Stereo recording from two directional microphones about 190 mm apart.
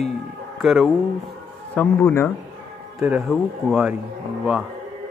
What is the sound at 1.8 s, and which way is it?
Speech, 10° left (ahead or behind).